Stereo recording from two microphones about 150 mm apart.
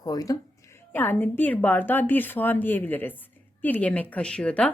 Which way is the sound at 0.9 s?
15° left (ahead or behind).